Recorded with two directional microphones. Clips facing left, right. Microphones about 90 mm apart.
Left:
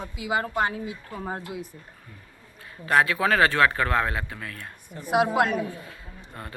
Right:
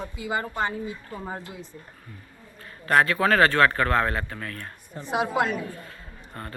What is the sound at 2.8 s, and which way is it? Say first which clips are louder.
A man's voice: right 1 dB; 15° left (ahead or behind).